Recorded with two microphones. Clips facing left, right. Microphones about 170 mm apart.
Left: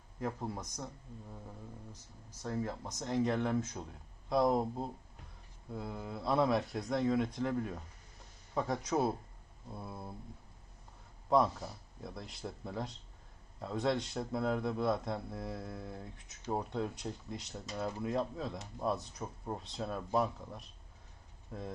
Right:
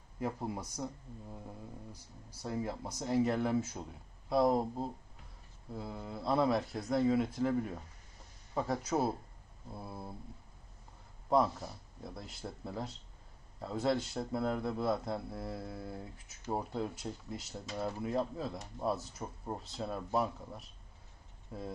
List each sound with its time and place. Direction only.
0.2 s speech: 10° right (ahead or behind)
1.9 s speech: 10° right (ahead or behind)
11.3 s speech: centre (ahead or behind)